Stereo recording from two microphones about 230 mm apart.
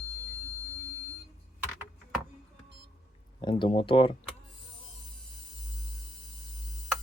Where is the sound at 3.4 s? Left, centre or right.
Left.